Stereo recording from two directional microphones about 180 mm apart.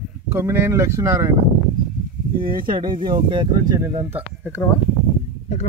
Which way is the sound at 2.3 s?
50° right (ahead or behind).